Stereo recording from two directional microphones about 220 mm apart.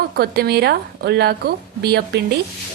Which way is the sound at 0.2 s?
45° right (ahead or behind).